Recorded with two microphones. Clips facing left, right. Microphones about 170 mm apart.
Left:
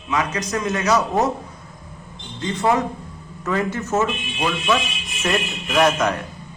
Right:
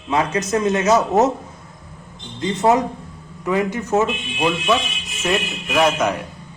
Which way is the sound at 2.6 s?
20° right (ahead or behind).